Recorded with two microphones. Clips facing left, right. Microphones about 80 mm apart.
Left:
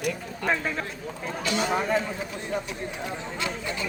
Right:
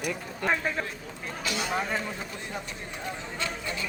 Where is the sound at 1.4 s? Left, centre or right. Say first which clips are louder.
Left 4 dB; centre.